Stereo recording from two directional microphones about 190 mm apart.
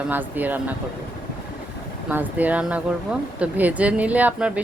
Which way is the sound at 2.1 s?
10° right (ahead or behind).